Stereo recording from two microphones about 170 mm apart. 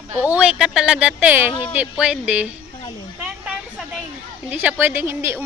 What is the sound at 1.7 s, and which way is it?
Speech, 5° right (ahead or behind).